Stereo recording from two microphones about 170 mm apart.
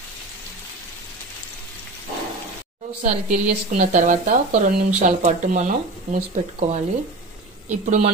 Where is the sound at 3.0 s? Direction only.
50° right (ahead or behind).